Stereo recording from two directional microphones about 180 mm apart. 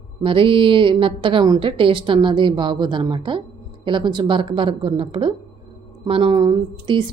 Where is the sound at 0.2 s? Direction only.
30° right (ahead or behind).